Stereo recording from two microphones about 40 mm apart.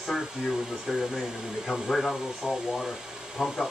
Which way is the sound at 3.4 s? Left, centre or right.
Centre.